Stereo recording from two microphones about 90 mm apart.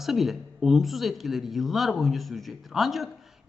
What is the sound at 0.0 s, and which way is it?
Speech, centre (ahead or behind).